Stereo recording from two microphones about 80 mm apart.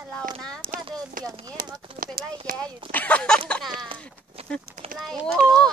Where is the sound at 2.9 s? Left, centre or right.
Centre.